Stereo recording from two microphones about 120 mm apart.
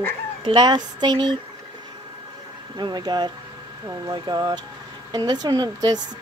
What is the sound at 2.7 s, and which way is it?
Speech, 35° right (ahead or behind).